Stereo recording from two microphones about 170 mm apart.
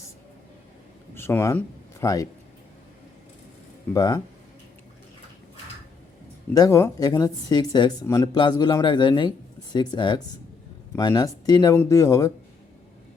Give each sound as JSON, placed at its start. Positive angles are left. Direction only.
{"t": 1.1, "sound": "speech", "side_deg": 15}
{"t": 3.9, "sound": "speech", "side_deg": 20}
{"t": 6.5, "sound": "speech", "side_deg": 20}